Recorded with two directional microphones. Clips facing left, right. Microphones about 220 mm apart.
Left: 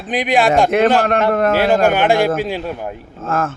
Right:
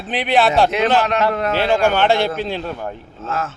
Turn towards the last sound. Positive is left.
turn(degrees=50)  # may be behind; listen again after turning